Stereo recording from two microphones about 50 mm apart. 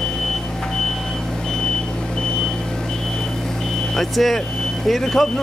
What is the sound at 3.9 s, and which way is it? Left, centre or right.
Vehicle, centre.